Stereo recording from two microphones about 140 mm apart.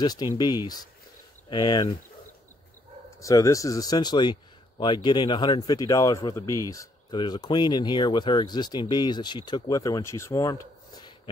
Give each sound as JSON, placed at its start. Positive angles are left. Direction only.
{"t": 0.0, "sound": "a man's voice", "side_deg": 30}
{"t": 1.5, "sound": "speech", "side_deg": 30}
{"t": 3.2, "sound": "a man's voice", "side_deg": 25}